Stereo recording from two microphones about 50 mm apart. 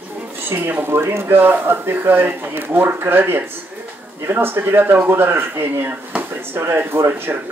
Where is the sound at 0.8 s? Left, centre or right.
Right.